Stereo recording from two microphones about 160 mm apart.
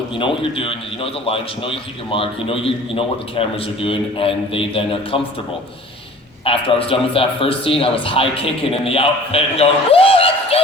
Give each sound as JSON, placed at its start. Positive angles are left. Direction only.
{"t": 0.2, "sound": "a man's voice", "side_deg": 35}
{"t": 6.4, "sound": "a man's voice", "side_deg": 35}